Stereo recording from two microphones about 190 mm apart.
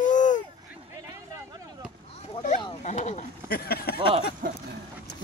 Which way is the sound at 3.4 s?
55° left (ahead or behind).